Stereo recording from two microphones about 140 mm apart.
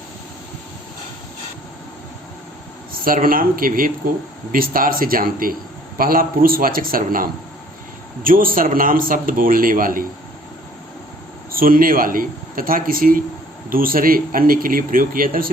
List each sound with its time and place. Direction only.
2.9 s a man's voice: 90° right
11.5 s a man's voice: 90° right